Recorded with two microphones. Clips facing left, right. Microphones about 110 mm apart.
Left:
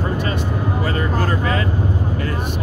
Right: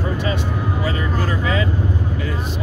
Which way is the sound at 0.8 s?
45° left (ahead or behind).